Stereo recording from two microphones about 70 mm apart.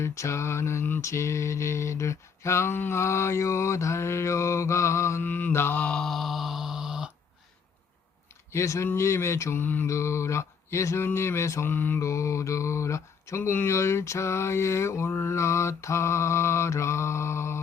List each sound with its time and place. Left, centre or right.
0.0 s mantra: left
1.0 s mantra: left
5.2 s mantra: left
5.7 s mantra: centre
8.5 s mantra: left
9.8 s mantra: left
11.7 s mantra: left
12.0 s mantra: left